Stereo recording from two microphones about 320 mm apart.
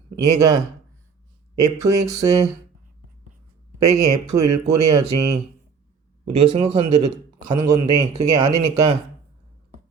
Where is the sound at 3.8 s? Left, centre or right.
Right.